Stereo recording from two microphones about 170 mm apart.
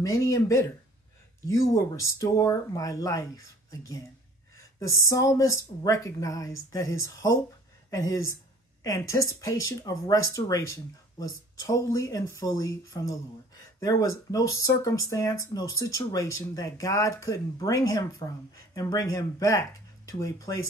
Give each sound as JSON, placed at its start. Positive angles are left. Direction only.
{"t": 0.0, "sound": "speech", "side_deg": 20}